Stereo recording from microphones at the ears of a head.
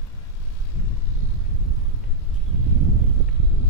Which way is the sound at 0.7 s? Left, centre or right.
Left.